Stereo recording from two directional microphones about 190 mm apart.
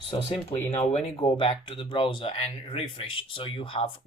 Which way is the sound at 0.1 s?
30° left (ahead or behind).